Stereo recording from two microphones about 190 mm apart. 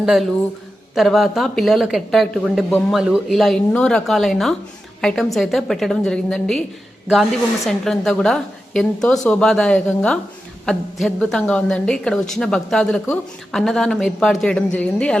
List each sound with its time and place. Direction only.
0.0 s a woman's voice: 5° right (ahead or behind)